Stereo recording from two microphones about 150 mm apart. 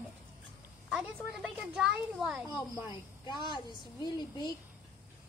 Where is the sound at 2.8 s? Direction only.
30° left (ahead or behind).